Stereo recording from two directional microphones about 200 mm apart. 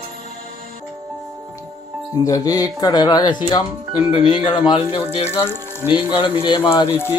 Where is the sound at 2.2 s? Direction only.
15° left (ahead or behind).